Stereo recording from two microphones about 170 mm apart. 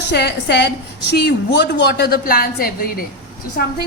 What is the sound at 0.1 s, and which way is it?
A woman's voice, 75° left (ahead or behind).